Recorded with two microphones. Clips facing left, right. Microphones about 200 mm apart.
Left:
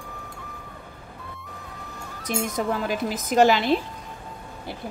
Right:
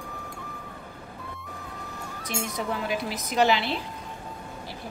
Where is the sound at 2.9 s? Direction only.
45° left (ahead or behind).